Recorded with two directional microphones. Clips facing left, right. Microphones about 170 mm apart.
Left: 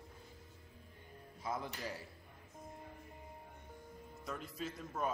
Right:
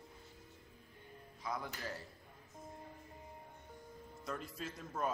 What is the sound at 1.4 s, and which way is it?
Speech, 25° left (ahead or behind).